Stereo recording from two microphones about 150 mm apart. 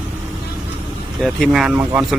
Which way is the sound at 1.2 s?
Centre (ahead or behind).